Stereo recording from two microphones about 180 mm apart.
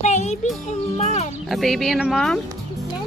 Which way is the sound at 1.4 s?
Centre (ahead or behind).